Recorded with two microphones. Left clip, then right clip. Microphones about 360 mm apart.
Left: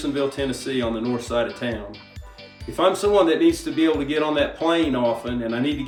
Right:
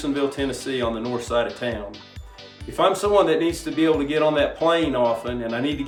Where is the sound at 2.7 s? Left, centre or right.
Centre.